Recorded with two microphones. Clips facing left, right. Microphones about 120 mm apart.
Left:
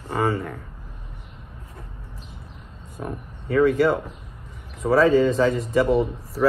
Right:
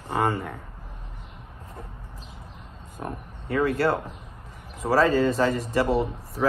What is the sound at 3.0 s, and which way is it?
Speech, 5° right (ahead or behind).